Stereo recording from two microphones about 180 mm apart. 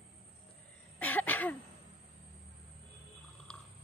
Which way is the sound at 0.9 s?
10° left (ahead or behind).